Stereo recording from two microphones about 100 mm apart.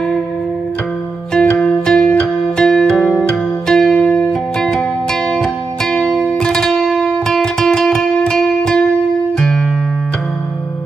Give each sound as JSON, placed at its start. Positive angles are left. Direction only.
{"t": 1.3, "sound": "music", "side_deg": 10}